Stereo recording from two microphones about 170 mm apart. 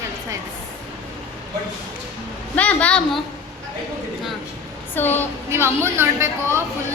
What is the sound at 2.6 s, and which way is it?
Speech, 10° left (ahead or behind).